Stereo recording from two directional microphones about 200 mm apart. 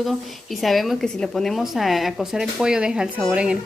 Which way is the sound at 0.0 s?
Centre (ahead or behind).